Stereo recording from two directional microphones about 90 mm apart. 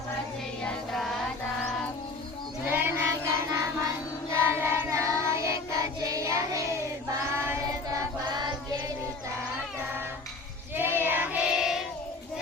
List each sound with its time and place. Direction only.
0.6 s music: 5° left (ahead or behind)
2.6 s child singing: 25° right (ahead or behind)
7.7 s choir: 40° right (ahead or behind)
8.3 s choir: 55° right (ahead or behind)
10.8 s child singing: 25° right (ahead or behind); by 11.8 s 5° right (ahead or behind)